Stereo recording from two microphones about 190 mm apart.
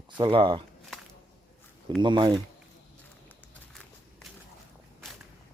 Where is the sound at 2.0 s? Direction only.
25° right (ahead or behind).